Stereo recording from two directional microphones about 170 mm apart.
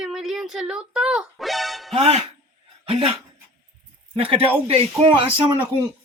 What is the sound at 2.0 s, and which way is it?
Speech, 35° right (ahead or behind).